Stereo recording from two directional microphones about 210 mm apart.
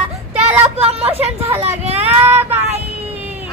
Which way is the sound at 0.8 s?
30° right (ahead or behind).